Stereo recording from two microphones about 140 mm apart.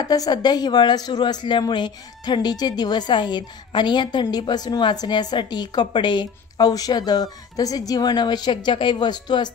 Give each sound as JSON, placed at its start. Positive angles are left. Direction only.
{"t": 0.0, "sound": "a woman's voice", "side_deg": 30}